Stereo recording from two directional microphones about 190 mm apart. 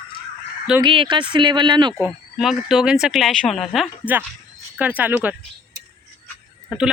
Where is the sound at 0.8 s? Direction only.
25° right (ahead or behind).